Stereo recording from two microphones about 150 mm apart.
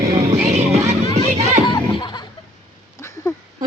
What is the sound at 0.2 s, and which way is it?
Music, 50° right (ahead or behind).